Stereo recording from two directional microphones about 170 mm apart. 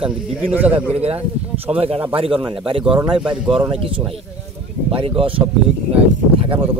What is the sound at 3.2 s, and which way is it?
Speech, 5° right (ahead or behind).